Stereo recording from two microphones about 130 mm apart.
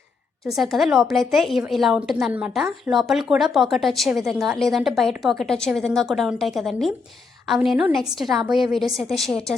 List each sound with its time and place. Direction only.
0.5 s a woman's voice: centre (ahead or behind)